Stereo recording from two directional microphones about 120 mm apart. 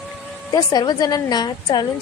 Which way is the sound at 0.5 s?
35° left (ahead or behind).